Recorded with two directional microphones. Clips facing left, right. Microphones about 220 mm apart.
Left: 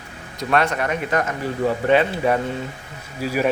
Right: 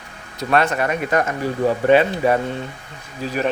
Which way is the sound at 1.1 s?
30° right (ahead or behind).